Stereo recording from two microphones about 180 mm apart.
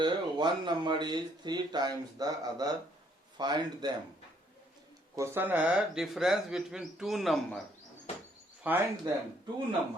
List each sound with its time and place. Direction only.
0.0 s speech: 25° right (ahead or behind)
5.1 s speech: 15° right (ahead or behind)
8.6 s speech: 10° right (ahead or behind)